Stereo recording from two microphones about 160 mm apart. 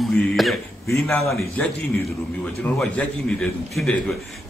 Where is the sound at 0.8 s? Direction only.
15° left (ahead or behind).